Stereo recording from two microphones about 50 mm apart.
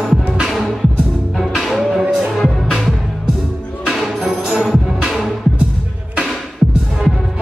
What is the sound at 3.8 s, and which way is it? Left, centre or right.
Music, centre.